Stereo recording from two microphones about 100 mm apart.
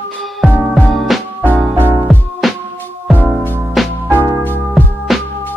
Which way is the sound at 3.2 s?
20° left (ahead or behind).